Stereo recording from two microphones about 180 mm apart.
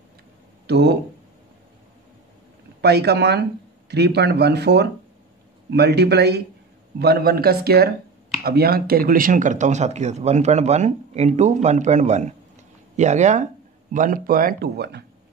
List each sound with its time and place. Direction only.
0.7 s speech: 65° right (ahead or behind)
2.8 s speech: 65° right (ahead or behind)